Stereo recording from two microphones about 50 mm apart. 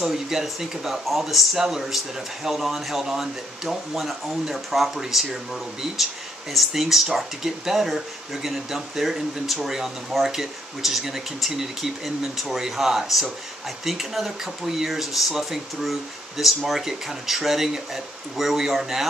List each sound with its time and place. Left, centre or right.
0.0 s speech: centre